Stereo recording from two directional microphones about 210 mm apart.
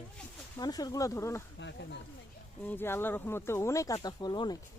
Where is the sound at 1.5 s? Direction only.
55° left (ahead or behind).